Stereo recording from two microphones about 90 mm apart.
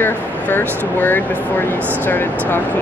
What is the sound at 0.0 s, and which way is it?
Speech, 25° left (ahead or behind).